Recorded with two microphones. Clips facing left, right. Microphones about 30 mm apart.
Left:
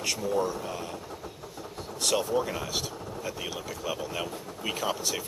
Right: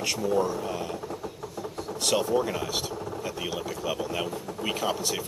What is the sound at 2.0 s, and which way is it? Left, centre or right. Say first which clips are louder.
Speech: right 2 dB; centre.